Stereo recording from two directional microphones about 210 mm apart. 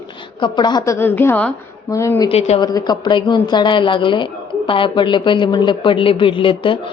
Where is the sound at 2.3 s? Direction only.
30° left (ahead or behind).